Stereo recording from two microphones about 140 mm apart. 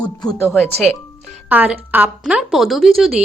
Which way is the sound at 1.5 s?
10° right (ahead or behind).